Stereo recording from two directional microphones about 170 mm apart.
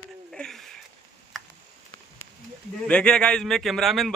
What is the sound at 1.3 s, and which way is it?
Tick, centre (ahead or behind).